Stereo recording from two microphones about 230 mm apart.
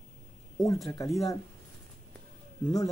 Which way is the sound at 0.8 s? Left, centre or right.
Centre.